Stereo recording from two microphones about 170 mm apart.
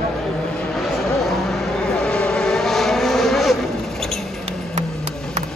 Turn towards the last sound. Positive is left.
turn(degrees=0)  # may be behind; listen again after turning